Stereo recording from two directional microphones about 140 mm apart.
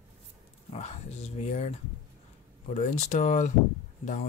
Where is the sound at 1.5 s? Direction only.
50° left (ahead or behind).